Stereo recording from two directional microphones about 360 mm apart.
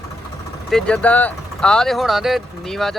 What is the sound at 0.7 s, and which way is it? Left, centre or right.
Speech, centre.